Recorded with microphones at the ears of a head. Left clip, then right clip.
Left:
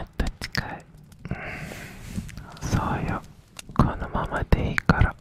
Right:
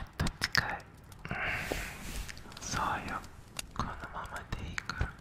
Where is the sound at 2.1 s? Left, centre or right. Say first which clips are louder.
Left 4 dB; left.